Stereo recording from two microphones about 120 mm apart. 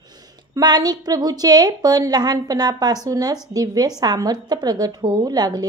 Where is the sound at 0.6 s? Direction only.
35° right (ahead or behind).